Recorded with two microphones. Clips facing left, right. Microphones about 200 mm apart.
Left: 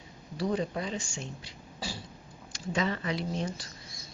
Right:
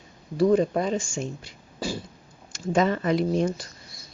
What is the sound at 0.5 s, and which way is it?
Speech, 50° right (ahead or behind).